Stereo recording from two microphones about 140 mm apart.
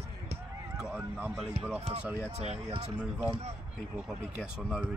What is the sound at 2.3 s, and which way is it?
Speech, 50° right (ahead or behind).